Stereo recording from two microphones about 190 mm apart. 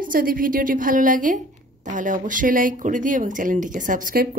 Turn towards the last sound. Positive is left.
turn(degrees=-50)  # may be behind; listen again after turning